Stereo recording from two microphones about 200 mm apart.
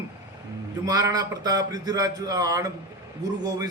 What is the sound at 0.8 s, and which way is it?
A man's voice, 20° right (ahead or behind).